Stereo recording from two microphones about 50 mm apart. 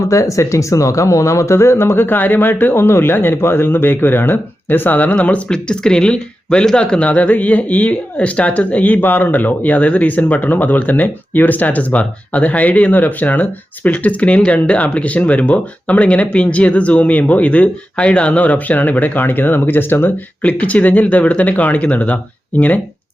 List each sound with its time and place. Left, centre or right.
0.1 s speech: left
5.5 s speech: centre; by 20.1 s left
20.4 s speech: left